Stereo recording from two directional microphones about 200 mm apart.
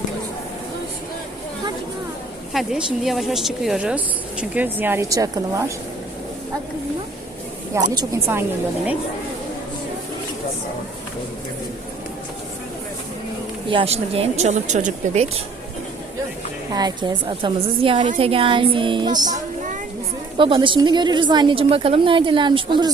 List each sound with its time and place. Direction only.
2.5 s speech: centre (ahead or behind)
7.7 s a woman's voice: 15° right (ahead or behind)
13.7 s speech: 30° right (ahead or behind)
16.7 s a woman's voice: 20° right (ahead or behind)